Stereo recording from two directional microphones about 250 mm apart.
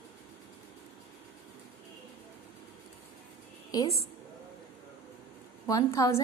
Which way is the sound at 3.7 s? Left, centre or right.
Centre.